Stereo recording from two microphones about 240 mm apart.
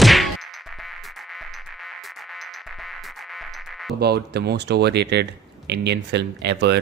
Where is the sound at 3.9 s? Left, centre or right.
Right.